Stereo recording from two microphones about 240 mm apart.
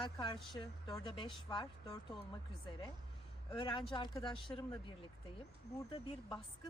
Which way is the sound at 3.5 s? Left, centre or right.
Centre.